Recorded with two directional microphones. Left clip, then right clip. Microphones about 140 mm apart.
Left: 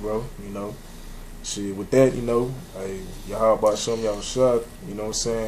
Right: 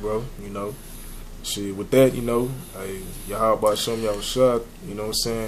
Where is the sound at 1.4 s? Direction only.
20° right (ahead or behind).